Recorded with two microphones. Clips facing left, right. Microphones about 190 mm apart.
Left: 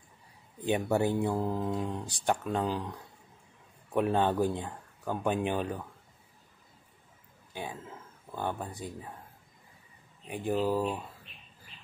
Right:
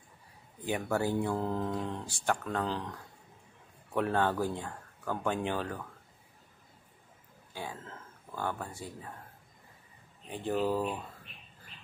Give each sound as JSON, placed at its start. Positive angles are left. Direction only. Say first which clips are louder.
{"t": 0.7, "sound": "speech", "louder": "left 3 dB", "side_deg": 20}
{"t": 7.5, "sound": "speech", "louder": "left 2 dB", "side_deg": 15}
{"t": 10.3, "sound": "speech", "louder": "left 2 dB", "side_deg": 10}